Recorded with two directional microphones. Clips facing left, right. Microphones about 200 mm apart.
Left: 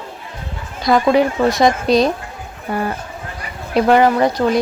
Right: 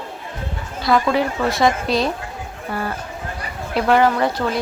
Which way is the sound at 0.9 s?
20° left (ahead or behind).